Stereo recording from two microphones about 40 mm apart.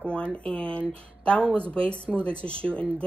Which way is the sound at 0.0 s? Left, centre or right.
Left.